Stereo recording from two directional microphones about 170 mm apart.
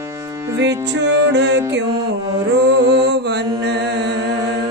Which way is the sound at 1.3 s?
90° right.